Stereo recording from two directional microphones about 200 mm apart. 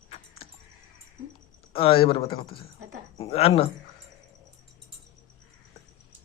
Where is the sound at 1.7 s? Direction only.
25° left (ahead or behind).